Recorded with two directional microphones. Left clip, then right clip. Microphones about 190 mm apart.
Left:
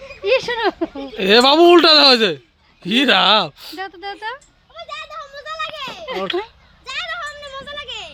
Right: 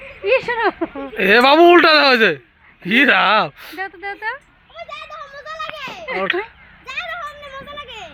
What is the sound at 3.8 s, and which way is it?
Speech, 20° left (ahead or behind).